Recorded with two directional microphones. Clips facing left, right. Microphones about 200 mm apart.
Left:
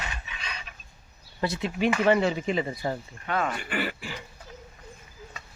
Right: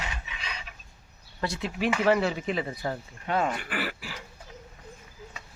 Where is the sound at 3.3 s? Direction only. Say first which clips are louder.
Right 1 dB; 30° right (ahead or behind).